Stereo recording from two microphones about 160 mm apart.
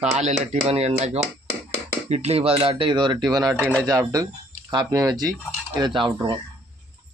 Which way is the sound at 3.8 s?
25° right (ahead or behind).